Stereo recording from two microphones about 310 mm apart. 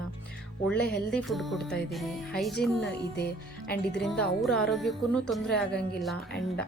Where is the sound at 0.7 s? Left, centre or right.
Centre.